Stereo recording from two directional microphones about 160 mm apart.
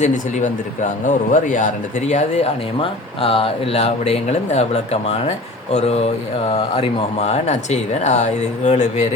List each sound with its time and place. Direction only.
0.0 s speech: 50° left (ahead or behind)